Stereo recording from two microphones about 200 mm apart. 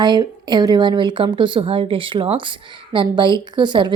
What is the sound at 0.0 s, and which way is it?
A woman's voice, 20° right (ahead or behind).